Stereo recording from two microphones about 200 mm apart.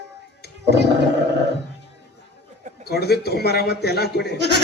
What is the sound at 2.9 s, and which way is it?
A man's voice, 55° left (ahead or behind).